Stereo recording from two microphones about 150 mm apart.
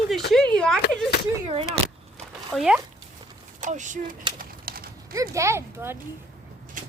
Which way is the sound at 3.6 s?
55° right (ahead or behind).